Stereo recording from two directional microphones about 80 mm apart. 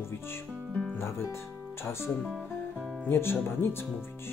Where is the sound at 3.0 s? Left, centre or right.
Left.